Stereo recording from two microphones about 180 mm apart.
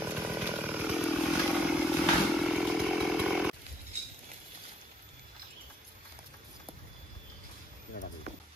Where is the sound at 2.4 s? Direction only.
Centre (ahead or behind).